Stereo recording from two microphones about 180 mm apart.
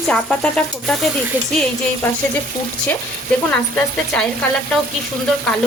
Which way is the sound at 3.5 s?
5° left (ahead or behind).